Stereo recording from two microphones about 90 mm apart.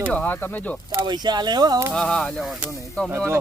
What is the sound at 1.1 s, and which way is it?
Speech, 50° right (ahead or behind).